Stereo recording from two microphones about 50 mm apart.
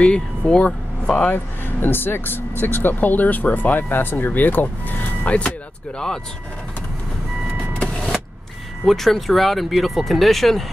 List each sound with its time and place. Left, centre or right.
0.0 s speech: centre
1.3 s speech: left
8.8 s speech: centre